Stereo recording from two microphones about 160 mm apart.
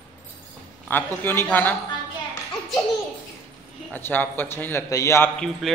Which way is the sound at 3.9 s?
10° left (ahead or behind).